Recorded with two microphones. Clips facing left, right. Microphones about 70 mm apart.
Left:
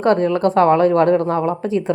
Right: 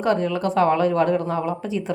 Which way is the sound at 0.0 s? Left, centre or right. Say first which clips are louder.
Left 6 dB; left.